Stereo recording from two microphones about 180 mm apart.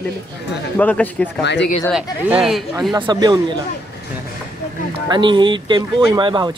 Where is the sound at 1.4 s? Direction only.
75° left (ahead or behind).